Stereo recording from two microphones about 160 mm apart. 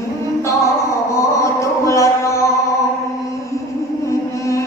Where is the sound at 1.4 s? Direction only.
20° left (ahead or behind).